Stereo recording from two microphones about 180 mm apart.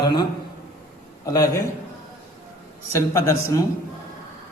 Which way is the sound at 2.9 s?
15° left (ahead or behind).